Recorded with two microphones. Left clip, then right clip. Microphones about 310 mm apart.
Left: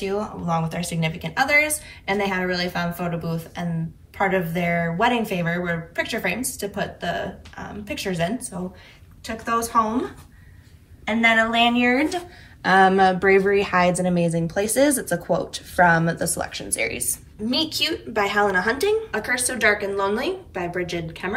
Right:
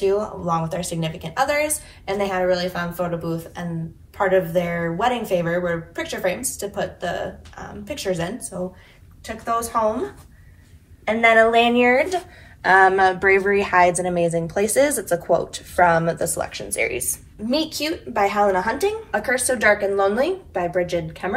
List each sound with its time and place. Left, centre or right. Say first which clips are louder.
0.0 s a woman's voice: right 5 dB; centre
11.8 s a woman's voice: right 4 dB; centre